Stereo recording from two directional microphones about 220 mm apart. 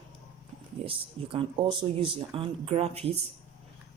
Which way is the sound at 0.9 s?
25° right (ahead or behind).